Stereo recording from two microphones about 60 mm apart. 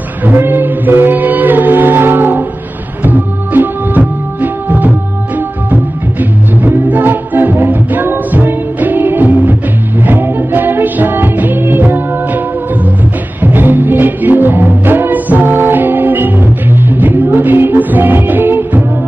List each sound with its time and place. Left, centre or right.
0.2 s music: right
13.4 s music: right